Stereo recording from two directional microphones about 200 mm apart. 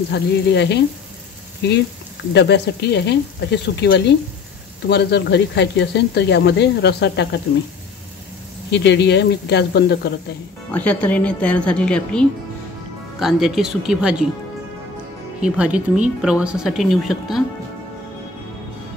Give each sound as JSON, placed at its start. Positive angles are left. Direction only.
{"t": 0.1, "sound": "speech", "side_deg": 60}
{"t": 8.7, "sound": "speech", "side_deg": 60}
{"t": 10.7, "sound": "speech", "side_deg": 5}
{"t": 15.4, "sound": "speech", "side_deg": -5}